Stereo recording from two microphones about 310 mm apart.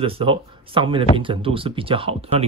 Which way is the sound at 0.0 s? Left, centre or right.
Centre.